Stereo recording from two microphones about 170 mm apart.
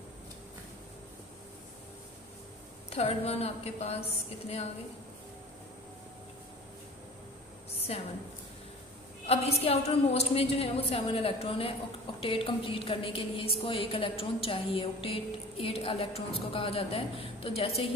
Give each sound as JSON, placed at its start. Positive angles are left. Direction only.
{"t": 2.9, "sound": "a woman's voice", "side_deg": 35}
{"t": 9.2, "sound": "a woman's voice", "side_deg": 35}